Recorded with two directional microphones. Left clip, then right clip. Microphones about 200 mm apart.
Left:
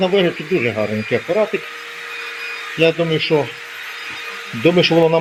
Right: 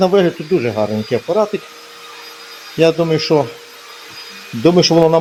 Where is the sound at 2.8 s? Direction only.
30° right (ahead or behind).